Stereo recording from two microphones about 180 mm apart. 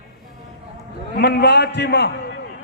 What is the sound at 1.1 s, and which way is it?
A man's voice, 65° left (ahead or behind).